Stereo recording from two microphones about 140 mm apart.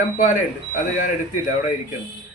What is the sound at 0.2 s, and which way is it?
Speech, 70° left (ahead or behind).